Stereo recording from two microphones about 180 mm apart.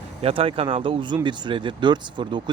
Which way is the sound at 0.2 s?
30° right (ahead or behind).